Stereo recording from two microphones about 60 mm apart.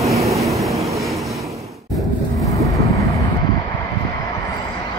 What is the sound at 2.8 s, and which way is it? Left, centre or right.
Vehicle, left.